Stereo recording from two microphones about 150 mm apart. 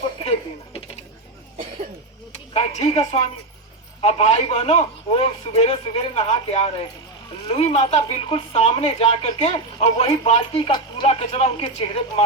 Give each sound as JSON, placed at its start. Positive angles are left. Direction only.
{"t": 2.5, "sound": "a woman's voice", "side_deg": 45}
{"t": 10.7, "sound": "speech", "side_deg": 30}
{"t": 11.1, "sound": "a man's voice", "side_deg": 45}